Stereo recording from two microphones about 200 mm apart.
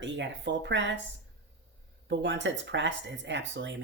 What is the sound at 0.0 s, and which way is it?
Speech, 65° right (ahead or behind).